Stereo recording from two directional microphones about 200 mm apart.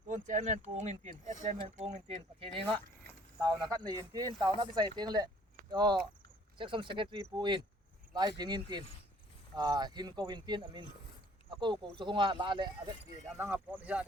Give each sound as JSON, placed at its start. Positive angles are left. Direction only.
{"t": 0.1, "sound": "speech", "side_deg": -35}
{"t": 3.7, "sound": "speech", "side_deg": -20}
{"t": 13.4, "sound": "speech", "side_deg": -10}